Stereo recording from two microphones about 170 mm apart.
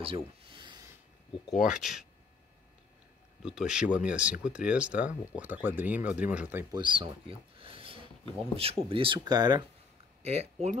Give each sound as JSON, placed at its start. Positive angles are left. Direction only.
{"t": 0.0, "sound": "a sound", "side_deg": -30}
{"t": 1.5, "sound": "speech", "side_deg": -5}
{"t": 3.4, "sound": "speech", "side_deg": -5}
{"t": 6.7, "sound": "a sound", "side_deg": -30}
{"t": 8.5, "sound": "speech", "side_deg": -35}
{"t": 10.2, "sound": "speech", "side_deg": -40}